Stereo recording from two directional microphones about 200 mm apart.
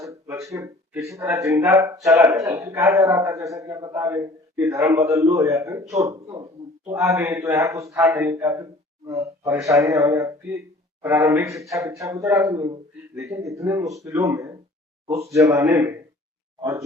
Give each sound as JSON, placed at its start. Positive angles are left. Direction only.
{"t": 0.0, "sound": "a man's voice", "side_deg": -15}